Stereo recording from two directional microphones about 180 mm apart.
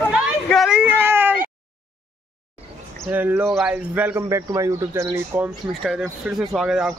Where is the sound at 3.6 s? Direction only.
5° right (ahead or behind).